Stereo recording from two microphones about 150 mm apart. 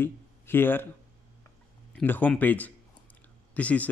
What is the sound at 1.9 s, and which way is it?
A man's voice, 10° left (ahead or behind).